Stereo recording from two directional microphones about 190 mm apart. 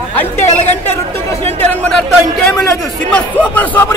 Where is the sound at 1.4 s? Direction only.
10° left (ahead or behind).